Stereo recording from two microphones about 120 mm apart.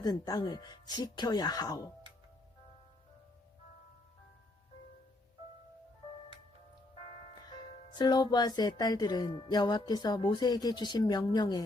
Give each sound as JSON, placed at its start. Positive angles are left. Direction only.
{"t": 0.0, "sound": "music", "side_deg": 35}
{"t": 7.9, "sound": "music", "side_deg": 35}